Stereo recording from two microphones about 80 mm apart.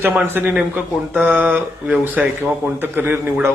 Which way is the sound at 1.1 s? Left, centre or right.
Centre.